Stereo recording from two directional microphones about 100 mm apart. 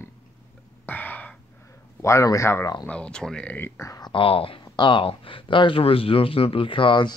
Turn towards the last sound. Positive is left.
turn(degrees=55)  # may be behind; listen again after turning